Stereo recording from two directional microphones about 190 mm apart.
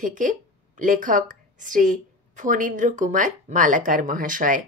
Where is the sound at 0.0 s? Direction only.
40° right (ahead or behind).